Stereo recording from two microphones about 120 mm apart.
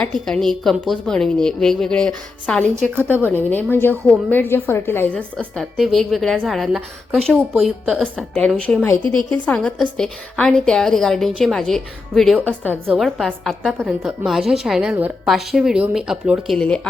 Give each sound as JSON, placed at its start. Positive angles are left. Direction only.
{"t": 0.0, "sound": "a woman's voice", "side_deg": 5}
{"t": 2.9, "sound": "speech", "side_deg": -15}
{"t": 3.3, "sound": "a woman's voice", "side_deg": 15}
{"t": 5.5, "sound": "a woman's voice", "side_deg": 0}
{"t": 14.9, "sound": "speech", "side_deg": -15}
{"t": 15.3, "sound": "a woman's voice", "side_deg": -5}
{"t": 16.6, "sound": "a woman's voice", "side_deg": 10}